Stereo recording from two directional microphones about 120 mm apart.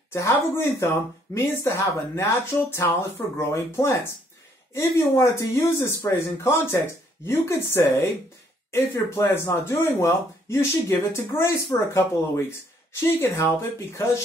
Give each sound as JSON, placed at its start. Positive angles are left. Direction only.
{"t": 0.1, "sound": "speech", "side_deg": 20}
{"t": 13.0, "sound": "speech", "side_deg": 20}